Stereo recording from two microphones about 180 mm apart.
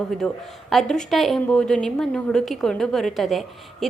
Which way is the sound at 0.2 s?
5° left (ahead or behind).